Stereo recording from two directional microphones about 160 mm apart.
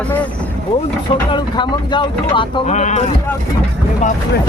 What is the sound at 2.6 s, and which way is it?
Speech, 50° left (ahead or behind).